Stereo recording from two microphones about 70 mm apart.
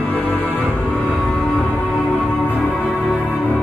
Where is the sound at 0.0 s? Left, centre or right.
Left.